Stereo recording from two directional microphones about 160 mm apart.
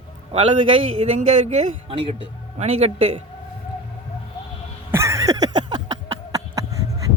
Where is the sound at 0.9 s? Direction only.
45° right (ahead or behind).